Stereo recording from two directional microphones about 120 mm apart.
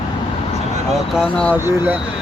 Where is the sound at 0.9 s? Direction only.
5° right (ahead or behind).